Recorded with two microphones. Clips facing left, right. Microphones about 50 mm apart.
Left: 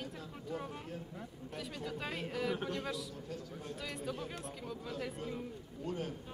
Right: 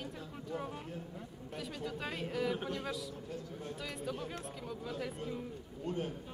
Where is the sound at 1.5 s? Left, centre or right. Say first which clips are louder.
Right 1 dB; centre.